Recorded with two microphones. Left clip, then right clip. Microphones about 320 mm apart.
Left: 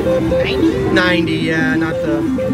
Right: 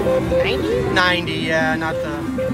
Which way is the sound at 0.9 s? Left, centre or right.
Centre.